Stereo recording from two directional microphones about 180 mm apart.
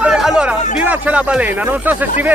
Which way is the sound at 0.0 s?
5° right (ahead or behind).